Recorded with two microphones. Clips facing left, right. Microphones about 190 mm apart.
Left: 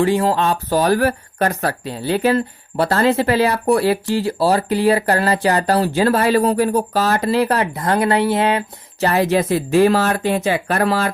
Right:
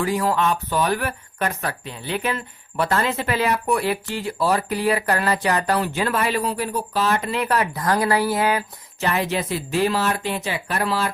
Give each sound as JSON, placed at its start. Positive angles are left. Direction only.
{"t": 0.0, "sound": "speech", "side_deg": 30}
{"t": 9.0, "sound": "speech", "side_deg": 40}